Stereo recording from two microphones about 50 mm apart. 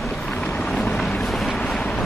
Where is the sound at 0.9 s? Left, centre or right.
Centre.